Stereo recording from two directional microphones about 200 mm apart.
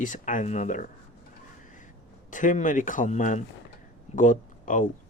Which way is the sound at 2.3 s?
40° left (ahead or behind).